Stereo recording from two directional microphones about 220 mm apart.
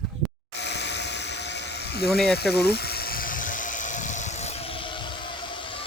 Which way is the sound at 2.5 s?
45° left (ahead or behind).